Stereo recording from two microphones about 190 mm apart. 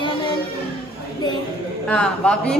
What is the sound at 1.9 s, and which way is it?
Speech, 5° left (ahead or behind).